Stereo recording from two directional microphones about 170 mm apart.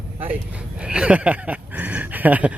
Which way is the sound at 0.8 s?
5° right (ahead or behind).